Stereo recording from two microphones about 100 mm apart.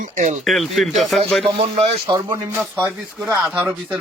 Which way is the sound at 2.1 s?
45° right (ahead or behind).